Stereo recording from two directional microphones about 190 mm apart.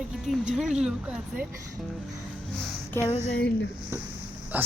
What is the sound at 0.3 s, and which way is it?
Speech, centre (ahead or behind).